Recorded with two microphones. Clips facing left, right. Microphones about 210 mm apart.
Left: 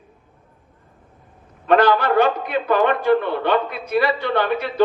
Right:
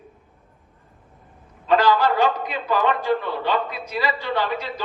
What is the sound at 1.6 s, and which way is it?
A man's voice, 60° left (ahead or behind).